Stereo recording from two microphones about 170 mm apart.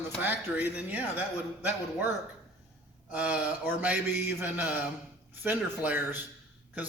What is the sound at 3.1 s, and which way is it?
Mantra, 10° right (ahead or behind).